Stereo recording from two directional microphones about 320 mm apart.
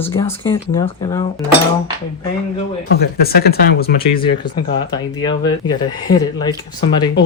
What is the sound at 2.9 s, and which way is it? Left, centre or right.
Speech, left.